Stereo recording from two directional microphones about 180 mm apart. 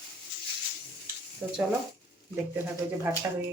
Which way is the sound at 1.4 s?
10° right (ahead or behind).